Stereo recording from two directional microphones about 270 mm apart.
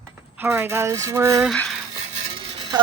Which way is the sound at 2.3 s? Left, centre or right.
Centre.